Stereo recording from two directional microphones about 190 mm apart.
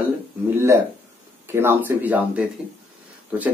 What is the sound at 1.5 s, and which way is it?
Speech, 10° right (ahead or behind).